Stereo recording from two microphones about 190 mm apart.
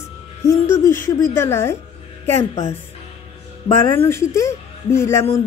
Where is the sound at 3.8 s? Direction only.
15° left (ahead or behind).